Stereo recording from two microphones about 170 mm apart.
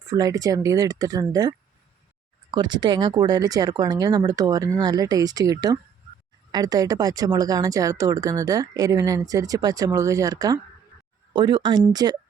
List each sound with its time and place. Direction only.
0.1 s speech: 20° right (ahead or behind)